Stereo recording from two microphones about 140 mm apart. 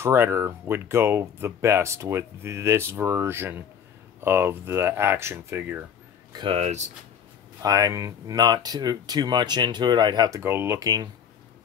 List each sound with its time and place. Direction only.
0.0 s speech: 15° right (ahead or behind)
6.3 s speech: 35° right (ahead or behind)
6.6 s speech: 55° right (ahead or behind)
7.6 s speech: 25° right (ahead or behind)
10.4 s speech: 15° right (ahead or behind)